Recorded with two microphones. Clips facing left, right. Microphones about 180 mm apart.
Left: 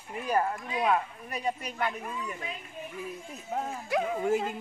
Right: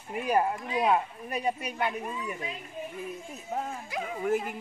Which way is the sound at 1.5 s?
10° right (ahead or behind).